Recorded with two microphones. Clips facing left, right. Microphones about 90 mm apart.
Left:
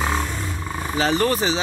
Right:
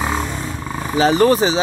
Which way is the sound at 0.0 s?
15° right (ahead or behind).